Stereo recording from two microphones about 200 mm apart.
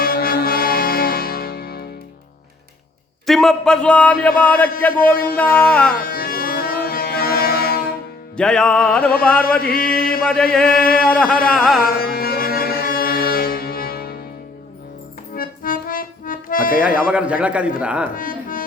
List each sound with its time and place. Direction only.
0.0 s music: 50° left (ahead or behind)
3.2 s a man's voice: centre (ahead or behind)
5.1 s mantra: 45° left (ahead or behind)
5.5 s a man's voice: 10° left (ahead or behind)
5.9 s music: 45° left (ahead or behind)
8.4 s a man's voice: 5° left (ahead or behind)
9.6 s mantra: 50° left (ahead or behind)
10.2 s a man's voice: 5° left (ahead or behind)
10.7 s mantra: 45° left (ahead or behind)
11.5 s a man's voice: centre (ahead or behind)
11.8 s music: 45° left (ahead or behind)
15.4 s accordion: 45° left (ahead or behind)
16.8 s a man's voice: 5° right (ahead or behind)
18.1 s music: 45° left (ahead or behind)